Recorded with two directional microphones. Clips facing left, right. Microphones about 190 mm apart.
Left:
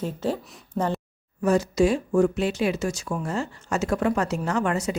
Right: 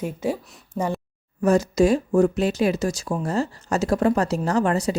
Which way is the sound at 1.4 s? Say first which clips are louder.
Right 3 dB; 45° right (ahead or behind).